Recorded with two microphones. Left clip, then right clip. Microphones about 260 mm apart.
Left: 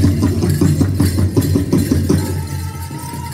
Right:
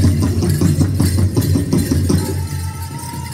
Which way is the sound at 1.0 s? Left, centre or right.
Right.